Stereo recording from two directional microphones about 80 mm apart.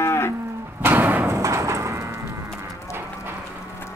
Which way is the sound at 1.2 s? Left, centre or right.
Right.